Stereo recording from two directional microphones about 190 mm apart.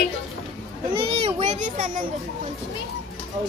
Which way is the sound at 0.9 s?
25° right (ahead or behind).